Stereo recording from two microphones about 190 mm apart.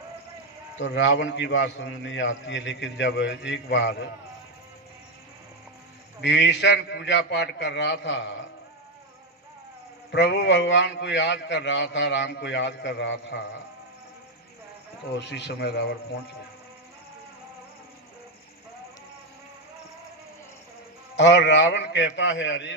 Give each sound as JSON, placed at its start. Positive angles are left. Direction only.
{"t": 0.8, "sound": "a man's voice", "side_deg": 75}
{"t": 6.2, "sound": "a man's voice", "side_deg": 70}
{"t": 10.1, "sound": "a man's voice", "side_deg": 65}
{"t": 15.2, "sound": "a man's voice", "side_deg": 65}
{"t": 21.2, "sound": "a man's voice", "side_deg": 65}